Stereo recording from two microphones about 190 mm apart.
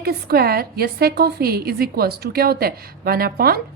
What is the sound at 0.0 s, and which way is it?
A woman's voice, 55° right (ahead or behind).